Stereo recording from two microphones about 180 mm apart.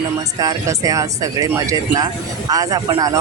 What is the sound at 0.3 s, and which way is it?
Speech, 20° right (ahead or behind).